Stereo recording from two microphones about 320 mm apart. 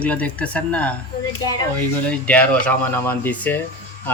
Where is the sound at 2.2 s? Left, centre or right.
Centre.